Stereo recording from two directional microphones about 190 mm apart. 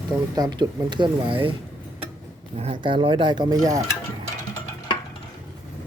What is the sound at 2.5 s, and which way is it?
Speech, 30° right (ahead or behind).